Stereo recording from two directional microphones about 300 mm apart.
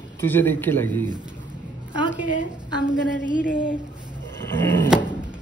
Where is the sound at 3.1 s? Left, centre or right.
Left.